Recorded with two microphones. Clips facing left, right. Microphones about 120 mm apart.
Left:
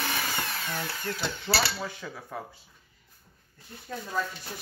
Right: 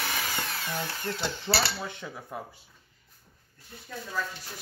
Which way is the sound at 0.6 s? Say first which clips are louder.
Even; 25° right (ahead or behind).